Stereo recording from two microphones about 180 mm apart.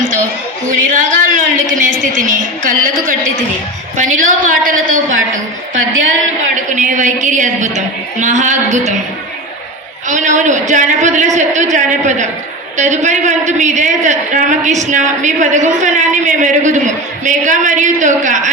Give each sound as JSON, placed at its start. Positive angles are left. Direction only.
{"t": 0.7, "sound": "a sound", "side_deg": -45}
{"t": 2.1, "sound": "a man's voice", "side_deg": -45}
{"t": 6.7, "sound": "a man's voice", "side_deg": -45}
{"t": 10.1, "sound": "a man's voice", "side_deg": -45}